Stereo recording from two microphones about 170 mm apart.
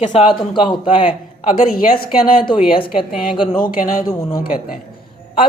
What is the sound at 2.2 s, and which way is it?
Speech, 55° left (ahead or behind).